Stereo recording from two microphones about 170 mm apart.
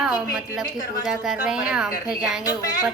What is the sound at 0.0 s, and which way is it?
A woman's voice, 5° right (ahead or behind).